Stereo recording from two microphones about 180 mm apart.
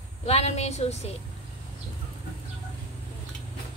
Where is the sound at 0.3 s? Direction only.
35° left (ahead or behind).